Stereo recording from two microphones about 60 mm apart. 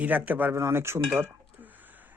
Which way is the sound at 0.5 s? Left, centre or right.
Right.